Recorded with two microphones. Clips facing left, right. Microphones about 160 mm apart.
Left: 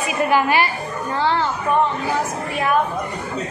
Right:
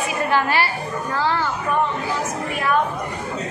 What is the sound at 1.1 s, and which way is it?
Music, 25° left (ahead or behind).